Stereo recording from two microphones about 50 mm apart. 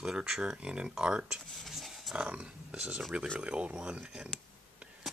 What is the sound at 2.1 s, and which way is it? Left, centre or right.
Speech, centre.